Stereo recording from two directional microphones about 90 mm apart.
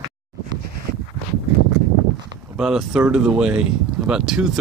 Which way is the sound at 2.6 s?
5° right (ahead or behind).